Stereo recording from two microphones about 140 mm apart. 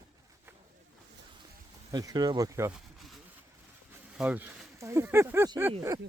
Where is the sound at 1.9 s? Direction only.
30° right (ahead or behind).